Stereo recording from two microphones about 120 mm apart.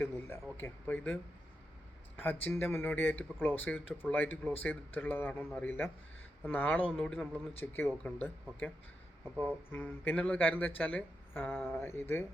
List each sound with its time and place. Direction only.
0.5 s speech: 15° left (ahead or behind)
9.7 s speech: 15° left (ahead or behind)